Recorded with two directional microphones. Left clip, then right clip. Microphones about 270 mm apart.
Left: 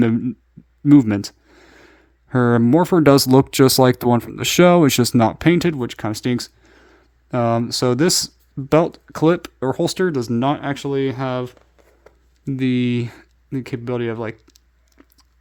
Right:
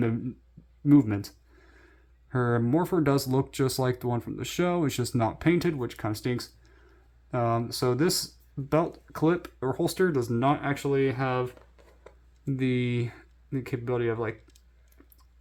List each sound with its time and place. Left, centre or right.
0.9 s speech: left
6.7 s a sound: left
8.7 s speech: left